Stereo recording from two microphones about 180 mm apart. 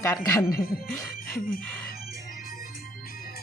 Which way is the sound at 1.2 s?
55° left (ahead or behind).